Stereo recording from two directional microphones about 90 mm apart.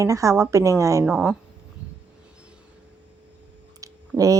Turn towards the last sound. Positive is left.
turn(degrees=-40)  # may be behind; listen again after turning